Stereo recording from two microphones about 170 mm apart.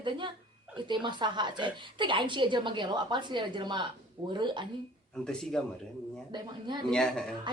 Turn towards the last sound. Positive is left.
turn(degrees=5)  # may be behind; listen again after turning